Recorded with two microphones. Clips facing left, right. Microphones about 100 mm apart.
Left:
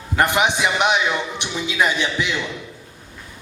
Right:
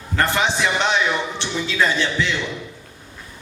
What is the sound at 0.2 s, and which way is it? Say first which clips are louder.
A man's voice: left 2 dB; 15° left (ahead or behind).